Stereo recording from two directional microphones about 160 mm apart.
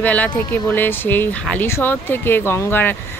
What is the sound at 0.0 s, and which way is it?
Speech, 10° left (ahead or behind).